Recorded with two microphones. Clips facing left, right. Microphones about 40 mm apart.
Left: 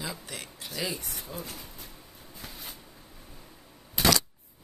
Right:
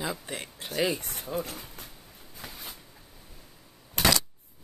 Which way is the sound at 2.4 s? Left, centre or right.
Centre.